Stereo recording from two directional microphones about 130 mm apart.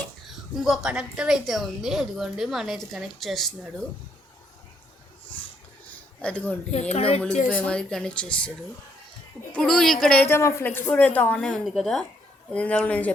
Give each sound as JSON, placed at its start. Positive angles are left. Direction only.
{"t": 0.5, "sound": "a woman's voice", "side_deg": -5}
{"t": 6.2, "sound": "a woman's voice", "side_deg": 10}
{"t": 6.7, "sound": "speech", "side_deg": 60}
{"t": 7.5, "sound": "a woman's voice", "side_deg": 10}
{"t": 10.2, "sound": "a woman's voice", "side_deg": 20}